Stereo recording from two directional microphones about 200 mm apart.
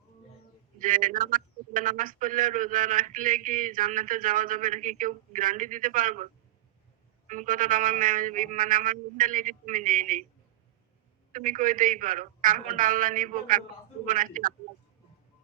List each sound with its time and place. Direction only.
0.8 s a man's voice: 40° right (ahead or behind)
7.3 s a man's voice: 40° right (ahead or behind)
11.3 s a man's voice: 40° right (ahead or behind)